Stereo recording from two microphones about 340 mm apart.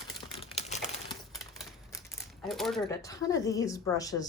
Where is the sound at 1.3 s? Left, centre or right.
Centre.